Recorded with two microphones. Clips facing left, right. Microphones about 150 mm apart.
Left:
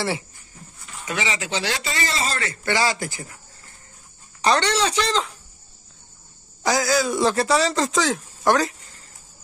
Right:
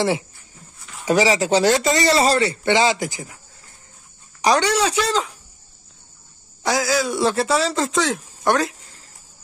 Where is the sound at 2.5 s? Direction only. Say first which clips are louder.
Right 5 dB; 20° right (ahead or behind).